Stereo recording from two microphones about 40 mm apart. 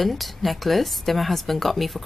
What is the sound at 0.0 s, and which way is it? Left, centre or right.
A woman's voice, centre.